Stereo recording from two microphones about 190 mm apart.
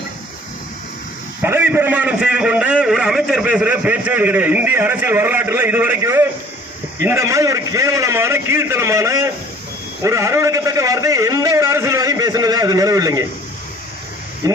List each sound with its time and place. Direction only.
1.4 s a man's voice: 10° right (ahead or behind)
14.4 s a man's voice: 15° right (ahead or behind)